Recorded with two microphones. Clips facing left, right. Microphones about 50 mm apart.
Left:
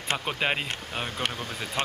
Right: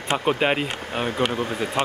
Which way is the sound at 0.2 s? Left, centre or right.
Right.